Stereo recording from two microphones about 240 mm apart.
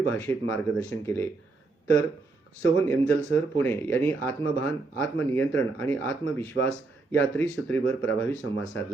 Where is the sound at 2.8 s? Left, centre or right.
Centre.